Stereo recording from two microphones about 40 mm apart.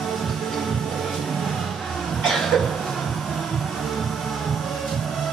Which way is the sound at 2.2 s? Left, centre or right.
Centre.